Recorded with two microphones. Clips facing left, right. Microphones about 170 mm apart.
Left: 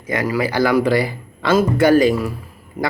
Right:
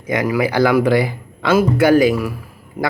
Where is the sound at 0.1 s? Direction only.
15° right (ahead or behind).